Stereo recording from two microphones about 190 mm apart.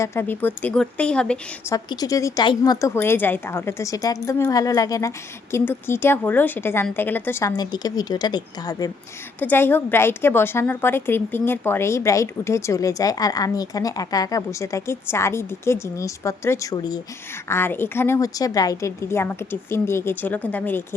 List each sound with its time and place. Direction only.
0.0 s a woman's voice: 15° left (ahead or behind)
1.7 s a woman's voice: 20° left (ahead or behind)
9.4 s a woman's voice: 10° left (ahead or behind)